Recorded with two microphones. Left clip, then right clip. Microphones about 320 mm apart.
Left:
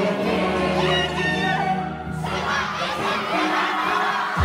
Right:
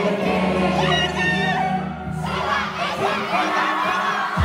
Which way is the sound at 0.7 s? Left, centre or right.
Centre.